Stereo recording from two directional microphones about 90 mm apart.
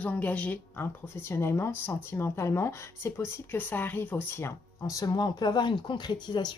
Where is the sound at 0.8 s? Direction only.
30° left (ahead or behind).